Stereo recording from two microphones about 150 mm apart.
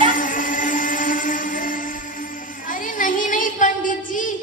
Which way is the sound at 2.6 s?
60° left (ahead or behind).